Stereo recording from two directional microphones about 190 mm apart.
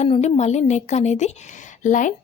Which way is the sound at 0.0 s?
35° left (ahead or behind).